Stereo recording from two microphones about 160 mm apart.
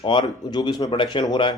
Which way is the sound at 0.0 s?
30° left (ahead or behind).